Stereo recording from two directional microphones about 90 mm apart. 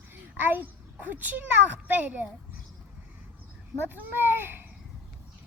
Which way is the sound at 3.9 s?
25° right (ahead or behind).